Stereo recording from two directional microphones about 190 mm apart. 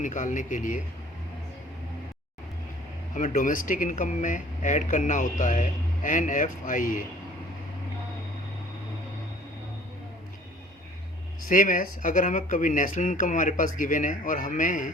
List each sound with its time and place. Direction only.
0.0 s speech: 40° left (ahead or behind)
3.2 s speech: 45° left (ahead or behind)
11.4 s speech: 45° left (ahead or behind)